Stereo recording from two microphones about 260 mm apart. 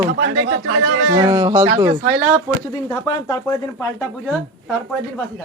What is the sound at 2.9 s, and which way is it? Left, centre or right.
Speech, centre.